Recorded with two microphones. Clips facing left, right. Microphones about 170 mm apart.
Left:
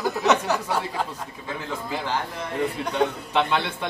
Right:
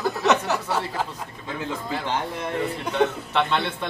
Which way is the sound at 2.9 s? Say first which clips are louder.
Right 1 dB; 10° left (ahead or behind).